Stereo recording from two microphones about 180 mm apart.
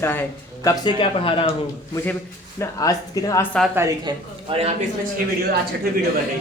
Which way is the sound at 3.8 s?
25° right (ahead or behind).